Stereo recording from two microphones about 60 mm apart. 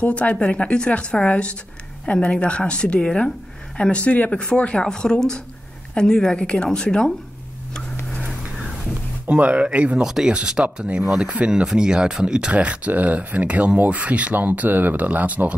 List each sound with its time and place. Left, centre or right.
0.0 s speech: left
9.3 s speech: centre
10.0 s speech: centre; by 15.5 s right